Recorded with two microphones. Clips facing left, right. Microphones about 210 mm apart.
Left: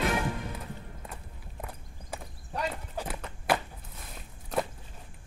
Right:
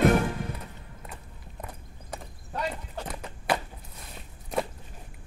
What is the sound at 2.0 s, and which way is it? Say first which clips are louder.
Clip-clop: right 1 dB; 5° left (ahead or behind).